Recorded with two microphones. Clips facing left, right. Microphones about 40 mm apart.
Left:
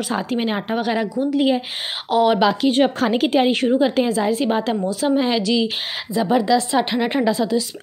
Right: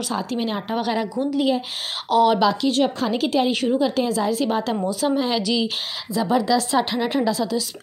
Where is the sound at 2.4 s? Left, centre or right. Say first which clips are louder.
Left 2 dB; left.